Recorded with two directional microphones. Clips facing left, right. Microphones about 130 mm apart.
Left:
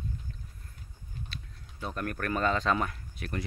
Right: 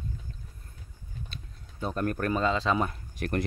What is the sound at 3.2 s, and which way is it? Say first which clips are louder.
Speech: right 7 dB; 55° right (ahead or behind).